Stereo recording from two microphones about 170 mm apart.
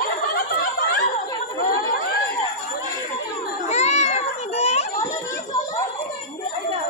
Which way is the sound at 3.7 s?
40° left (ahead or behind).